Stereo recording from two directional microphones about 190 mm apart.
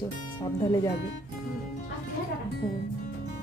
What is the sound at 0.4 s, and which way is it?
Speech, 15° left (ahead or behind).